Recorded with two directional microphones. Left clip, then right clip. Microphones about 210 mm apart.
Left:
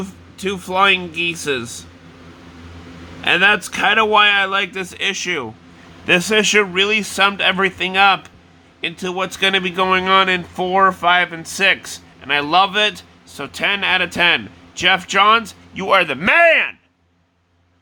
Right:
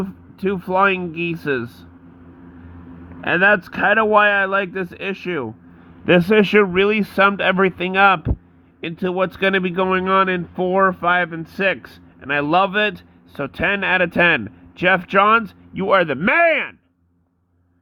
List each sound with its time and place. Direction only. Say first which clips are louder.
0.3 s speech: left 1 dB; 20° right (ahead or behind)
3.2 s speech: left 1 dB; 15° right (ahead or behind)